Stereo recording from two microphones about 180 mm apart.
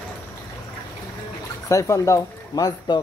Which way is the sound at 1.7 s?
15° left (ahead or behind).